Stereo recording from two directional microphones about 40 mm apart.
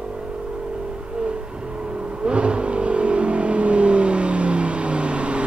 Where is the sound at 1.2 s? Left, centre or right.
Right.